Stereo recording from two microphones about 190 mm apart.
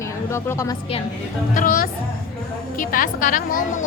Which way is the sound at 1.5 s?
45° left (ahead or behind).